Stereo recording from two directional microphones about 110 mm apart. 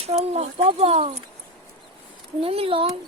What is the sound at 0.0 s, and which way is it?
Speech, 70° right (ahead or behind).